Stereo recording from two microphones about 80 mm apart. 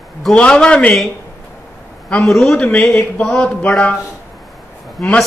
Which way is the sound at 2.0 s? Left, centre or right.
Centre.